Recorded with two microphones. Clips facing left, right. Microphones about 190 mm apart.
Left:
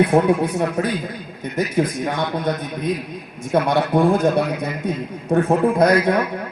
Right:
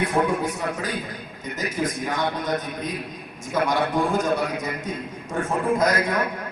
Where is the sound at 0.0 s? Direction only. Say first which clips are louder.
Left 7 dB; 60° left (ahead or behind).